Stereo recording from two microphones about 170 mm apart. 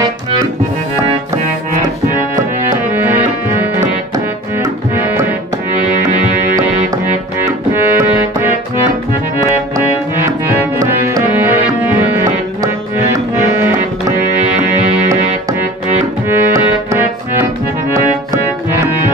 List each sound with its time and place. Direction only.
1.7 s music: 50° right (ahead or behind)
3.0 s music: 10° right (ahead or behind)
5.0 s music: 10° right (ahead or behind)
6.5 s music: 15° right (ahead or behind)
10.8 s music: 15° right (ahead or behind)
16.3 s music: 15° right (ahead or behind)